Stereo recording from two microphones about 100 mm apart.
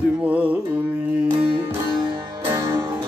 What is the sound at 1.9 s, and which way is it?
Music, 50° right (ahead or behind).